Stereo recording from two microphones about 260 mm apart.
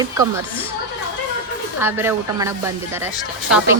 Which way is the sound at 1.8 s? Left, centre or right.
Centre.